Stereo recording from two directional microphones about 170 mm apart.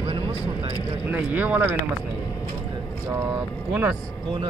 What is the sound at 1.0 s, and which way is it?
Speech, 10° right (ahead or behind).